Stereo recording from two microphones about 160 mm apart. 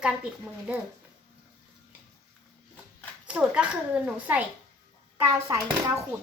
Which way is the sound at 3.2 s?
5° right (ahead or behind).